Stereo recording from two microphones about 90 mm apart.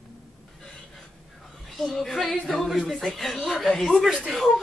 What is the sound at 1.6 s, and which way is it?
Speech, centre (ahead or behind).